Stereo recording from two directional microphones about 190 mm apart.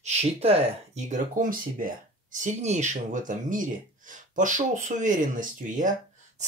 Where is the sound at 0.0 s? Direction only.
35° right (ahead or behind).